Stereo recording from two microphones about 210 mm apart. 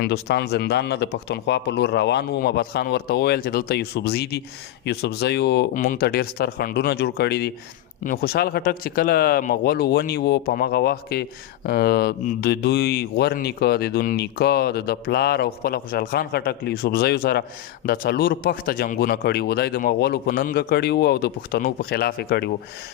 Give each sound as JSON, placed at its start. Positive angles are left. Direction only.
{"t": 0.0, "sound": "speech", "side_deg": 50}
{"t": 5.7, "sound": "speech", "side_deg": 40}